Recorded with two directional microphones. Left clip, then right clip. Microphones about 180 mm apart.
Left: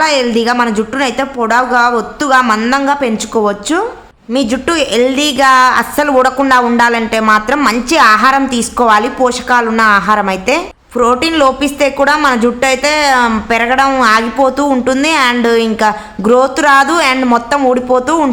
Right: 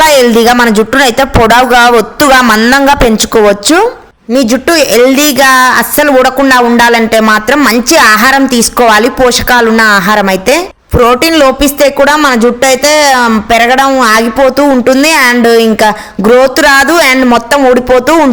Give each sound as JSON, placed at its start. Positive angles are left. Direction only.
{"t": 0.0, "sound": "speech", "side_deg": -50}